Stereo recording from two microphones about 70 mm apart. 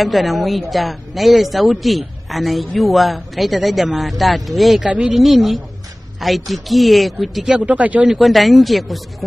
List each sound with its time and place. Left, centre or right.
0.0 s a woman's voice: centre
7.5 s speech: centre
8.1 s a woman's voice: centre